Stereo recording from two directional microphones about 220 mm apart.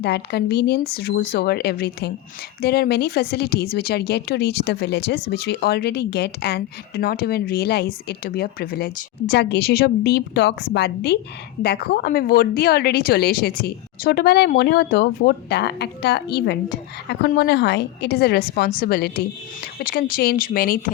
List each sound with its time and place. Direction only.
0.0 s a woman's voice: 50° left (ahead or behind)